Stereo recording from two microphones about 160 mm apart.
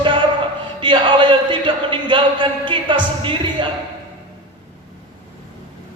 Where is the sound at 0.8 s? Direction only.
30° right (ahead or behind).